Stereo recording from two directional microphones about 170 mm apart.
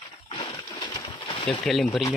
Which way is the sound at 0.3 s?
25° left (ahead or behind).